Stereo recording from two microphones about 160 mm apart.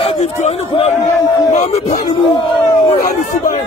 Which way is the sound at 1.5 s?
50° left (ahead or behind).